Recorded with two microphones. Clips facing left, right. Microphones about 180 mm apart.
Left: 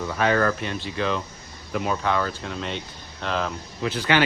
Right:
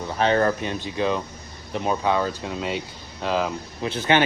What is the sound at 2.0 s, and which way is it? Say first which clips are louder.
Speech: right 2 dB; 15° right (ahead or behind).